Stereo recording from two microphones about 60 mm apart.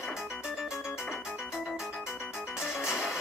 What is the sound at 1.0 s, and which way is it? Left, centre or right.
Music, centre.